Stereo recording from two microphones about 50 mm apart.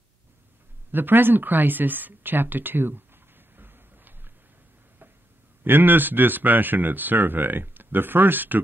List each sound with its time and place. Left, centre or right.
0.9 s speech: right
3.5 s a sound: right
5.6 s speech: right